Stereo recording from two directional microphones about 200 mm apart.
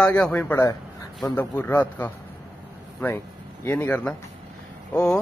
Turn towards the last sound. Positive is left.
turn(degrees=5)  # may be behind; listen again after turning